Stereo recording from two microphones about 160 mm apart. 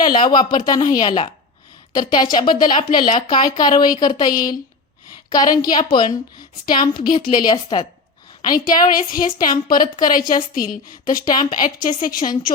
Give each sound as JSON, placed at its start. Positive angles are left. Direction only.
{"t": 0.0, "sound": "speech", "side_deg": 30}
{"t": 8.5, "sound": "a woman's voice", "side_deg": 60}